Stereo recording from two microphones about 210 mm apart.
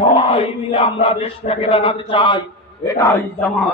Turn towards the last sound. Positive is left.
turn(degrees=10)  # may be behind; listen again after turning